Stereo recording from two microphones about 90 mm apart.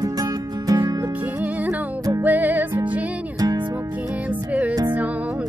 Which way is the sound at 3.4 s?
50° right (ahead or behind).